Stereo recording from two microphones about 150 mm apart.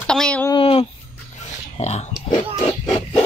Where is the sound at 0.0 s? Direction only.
5° left (ahead or behind).